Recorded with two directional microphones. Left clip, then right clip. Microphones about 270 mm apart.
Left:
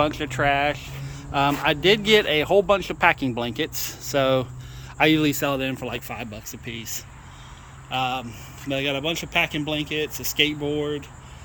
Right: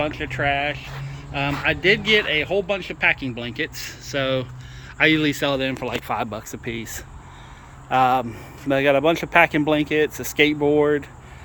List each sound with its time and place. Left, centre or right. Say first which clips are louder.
0.0 s speech: left 1 dB; centre